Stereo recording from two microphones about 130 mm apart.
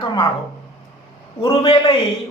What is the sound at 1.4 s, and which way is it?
Speech, 40° left (ahead or behind).